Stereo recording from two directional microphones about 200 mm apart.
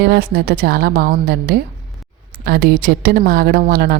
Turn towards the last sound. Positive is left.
turn(degrees=-45)  # may be behind; listen again after turning